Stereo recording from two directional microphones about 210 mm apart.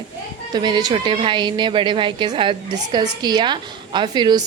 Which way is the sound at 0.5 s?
20° right (ahead or behind).